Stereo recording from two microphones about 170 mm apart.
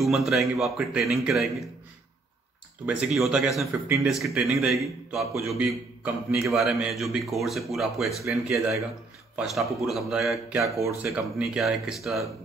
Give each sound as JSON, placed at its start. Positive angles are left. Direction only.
{"t": 0.0, "sound": "a man's voice", "side_deg": 0}
{"t": 2.9, "sound": "a man's voice", "side_deg": -5}
{"t": 5.7, "sound": "a man's voice", "side_deg": -15}
{"t": 6.5, "sound": "a man's voice", "side_deg": 0}
{"t": 10.8, "sound": "a man's voice", "side_deg": -15}